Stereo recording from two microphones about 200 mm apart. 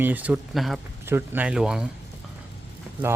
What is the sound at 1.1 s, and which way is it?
Speech, 10° right (ahead or behind).